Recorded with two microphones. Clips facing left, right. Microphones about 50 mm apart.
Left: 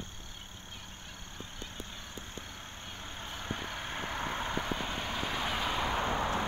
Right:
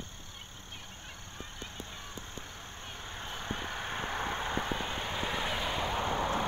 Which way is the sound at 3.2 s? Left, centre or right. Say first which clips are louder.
Right 1 dB; centre.